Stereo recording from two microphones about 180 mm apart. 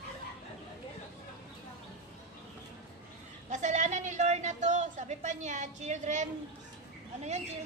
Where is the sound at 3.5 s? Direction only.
40° right (ahead or behind).